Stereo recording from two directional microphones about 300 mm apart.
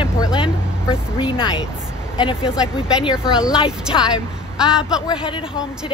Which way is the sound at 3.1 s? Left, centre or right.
Centre.